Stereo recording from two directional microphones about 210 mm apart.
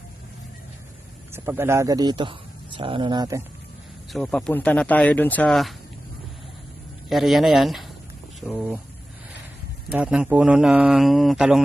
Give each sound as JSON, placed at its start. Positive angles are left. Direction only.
{"t": 1.3, "sound": "a man's voice", "side_deg": -10}
{"t": 4.1, "sound": "speech", "side_deg": 0}
{"t": 7.1, "sound": "speech", "side_deg": 0}
{"t": 9.9, "sound": "speech", "side_deg": -5}